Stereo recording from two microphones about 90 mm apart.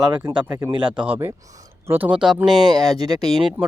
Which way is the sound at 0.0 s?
50° right (ahead or behind).